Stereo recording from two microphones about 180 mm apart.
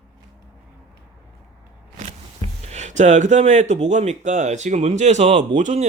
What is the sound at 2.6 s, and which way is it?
Speech, 40° right (ahead or behind).